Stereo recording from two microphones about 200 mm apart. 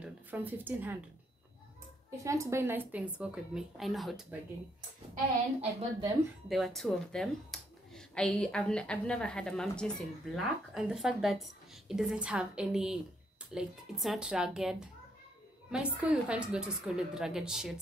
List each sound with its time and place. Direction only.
0.0 s speech: 10° right (ahead or behind)
2.0 s a woman's voice: 15° right (ahead or behind)
5.6 s a woman's voice: 30° right (ahead or behind)
6.5 s speech: centre (ahead or behind)